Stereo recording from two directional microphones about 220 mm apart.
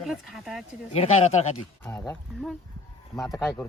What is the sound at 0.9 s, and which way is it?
Speech, 30° left (ahead or behind).